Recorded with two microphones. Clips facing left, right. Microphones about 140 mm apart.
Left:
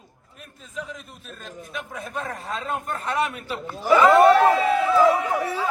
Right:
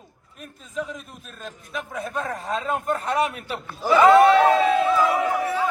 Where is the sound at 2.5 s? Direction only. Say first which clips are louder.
Right 5 dB; 40° right (ahead or behind).